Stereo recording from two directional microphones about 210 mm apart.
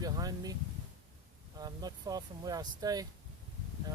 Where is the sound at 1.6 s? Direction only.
20° right (ahead or behind).